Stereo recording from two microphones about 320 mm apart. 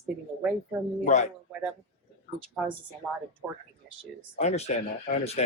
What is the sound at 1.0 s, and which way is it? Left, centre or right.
Speech, left.